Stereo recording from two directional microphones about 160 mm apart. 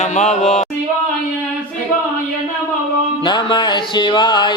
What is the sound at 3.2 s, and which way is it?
Music, 30° left (ahead or behind).